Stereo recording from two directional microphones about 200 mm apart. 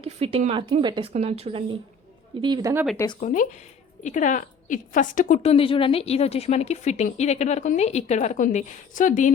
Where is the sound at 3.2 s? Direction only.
40° left (ahead or behind).